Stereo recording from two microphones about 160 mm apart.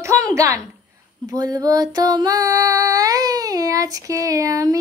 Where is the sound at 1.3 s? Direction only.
25° right (ahead or behind).